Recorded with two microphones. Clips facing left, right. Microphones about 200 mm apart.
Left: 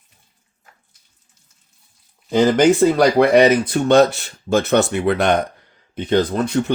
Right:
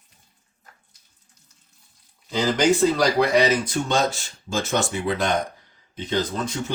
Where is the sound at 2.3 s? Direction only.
55° left (ahead or behind).